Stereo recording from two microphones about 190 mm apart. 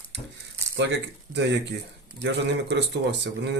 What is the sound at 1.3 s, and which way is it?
Speech, 65° right (ahead or behind).